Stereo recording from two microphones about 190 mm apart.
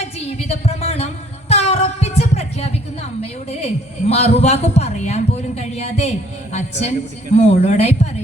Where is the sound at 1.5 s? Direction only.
30° left (ahead or behind).